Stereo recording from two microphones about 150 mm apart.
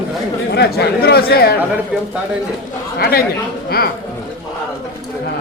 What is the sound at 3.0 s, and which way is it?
Speech, 85° left.